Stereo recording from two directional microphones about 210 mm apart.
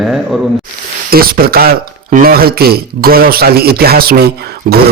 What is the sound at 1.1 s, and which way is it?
Speech, 45° right (ahead or behind).